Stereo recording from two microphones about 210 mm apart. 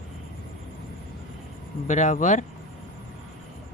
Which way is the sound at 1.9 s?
35° left (ahead or behind).